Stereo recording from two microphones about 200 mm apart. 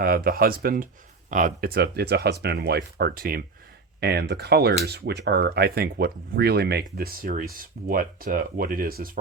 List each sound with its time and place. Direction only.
0.0 s speech: 50° right (ahead or behind)